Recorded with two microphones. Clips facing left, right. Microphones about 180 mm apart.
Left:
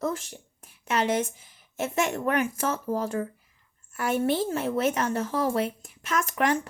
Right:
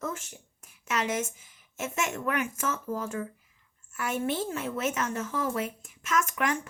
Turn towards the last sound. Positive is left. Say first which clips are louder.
# left 3 dB
turn(degrees=35)  # may be behind; listen again after turning